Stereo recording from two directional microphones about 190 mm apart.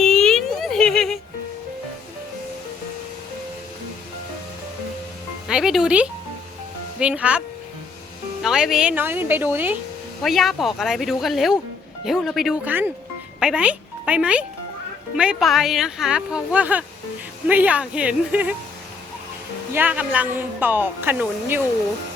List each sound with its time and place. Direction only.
0.0 s a sound: 5° left (ahead or behind)
5.5 s speech: 5° right (ahead or behind)
19.7 s speech: 10° right (ahead or behind)